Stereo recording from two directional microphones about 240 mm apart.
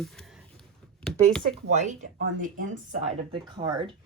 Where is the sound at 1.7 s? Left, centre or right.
Right.